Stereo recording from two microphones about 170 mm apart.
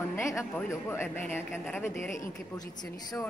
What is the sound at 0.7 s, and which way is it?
A woman's voice, 15° left (ahead or behind).